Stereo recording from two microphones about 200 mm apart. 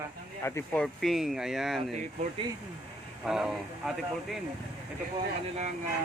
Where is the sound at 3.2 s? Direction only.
Centre (ahead or behind).